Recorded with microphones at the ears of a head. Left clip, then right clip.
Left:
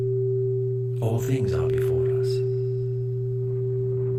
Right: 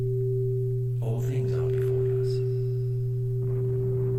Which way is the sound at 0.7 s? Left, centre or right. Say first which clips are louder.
Left 6 dB; left.